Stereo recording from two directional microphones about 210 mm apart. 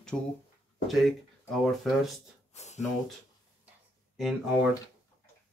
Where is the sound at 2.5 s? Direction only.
30° left (ahead or behind).